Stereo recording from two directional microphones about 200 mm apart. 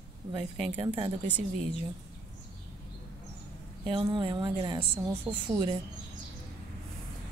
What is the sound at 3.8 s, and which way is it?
A woman's voice, 25° right (ahead or behind).